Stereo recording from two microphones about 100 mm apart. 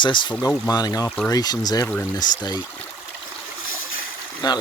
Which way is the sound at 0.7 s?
40° left (ahead or behind).